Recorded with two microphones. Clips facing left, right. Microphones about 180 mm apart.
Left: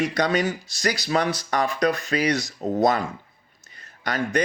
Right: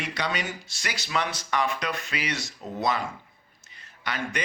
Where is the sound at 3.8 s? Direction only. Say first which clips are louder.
Left 6 dB; 45° left (ahead or behind).